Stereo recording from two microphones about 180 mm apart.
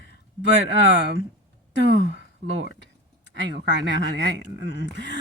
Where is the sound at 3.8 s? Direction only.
75° right (ahead or behind).